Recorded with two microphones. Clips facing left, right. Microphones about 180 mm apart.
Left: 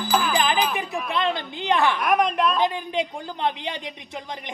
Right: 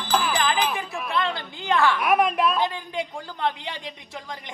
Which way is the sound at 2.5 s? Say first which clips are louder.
Left 3 dB; 20° left (ahead or behind).